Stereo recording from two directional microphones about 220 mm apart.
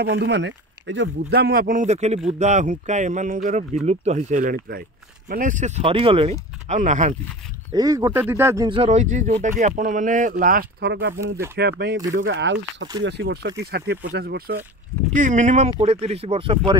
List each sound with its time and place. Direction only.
0.0 s speech: 50° right (ahead or behind); by 7.2 s 35° right (ahead or behind)
7.7 s speech: 15° right (ahead or behind)
8.6 s speech: 25° right (ahead or behind); by 14.6 s 45° right (ahead or behind)
15.1 s speech: 35° right (ahead or behind)